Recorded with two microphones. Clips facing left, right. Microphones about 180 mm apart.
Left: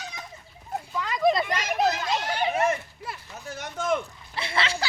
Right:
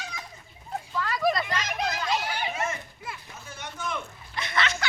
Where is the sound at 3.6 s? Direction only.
50° left (ahead or behind).